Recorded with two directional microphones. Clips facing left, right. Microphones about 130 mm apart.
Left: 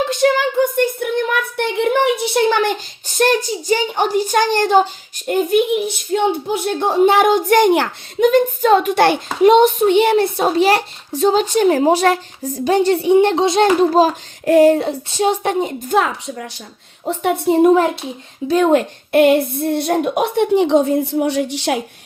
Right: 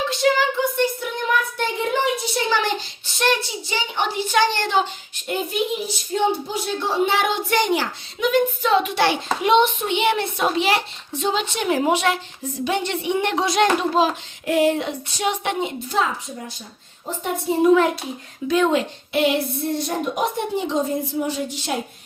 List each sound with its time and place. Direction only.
0.1 s child singing: 50° left (ahead or behind)
6.1 s a child's voice: 55° left (ahead or behind); by 13.1 s 35° left (ahead or behind)
13.1 s a child's voice: 25° left (ahead or behind)
13.9 s a child's voice: 45° left (ahead or behind)
16.0 s a woman's voice: 75° left (ahead or behind)
18.4 s a woman's voice: 45° left (ahead or behind); by 21.8 s 80° left